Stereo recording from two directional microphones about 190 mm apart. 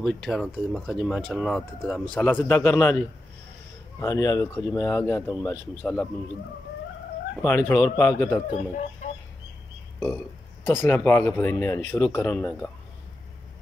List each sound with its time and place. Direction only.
0.0 s speech: centre (ahead or behind)
4.0 s speech: 20° left (ahead or behind)
7.4 s speech: 10° left (ahead or behind)
9.0 s fowl: 35° left (ahead or behind)
9.9 s speech: 10° left (ahead or behind)